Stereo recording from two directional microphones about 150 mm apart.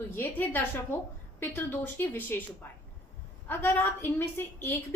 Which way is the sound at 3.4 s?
15° left (ahead or behind).